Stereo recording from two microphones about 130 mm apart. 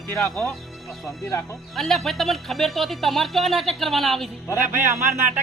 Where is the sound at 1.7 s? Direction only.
Centre (ahead or behind).